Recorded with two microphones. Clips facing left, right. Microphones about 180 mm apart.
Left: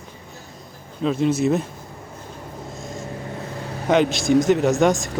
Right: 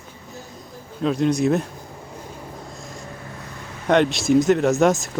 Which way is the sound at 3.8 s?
Centre (ahead or behind).